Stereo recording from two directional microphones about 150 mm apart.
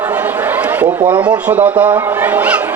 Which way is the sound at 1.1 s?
10° right (ahead or behind).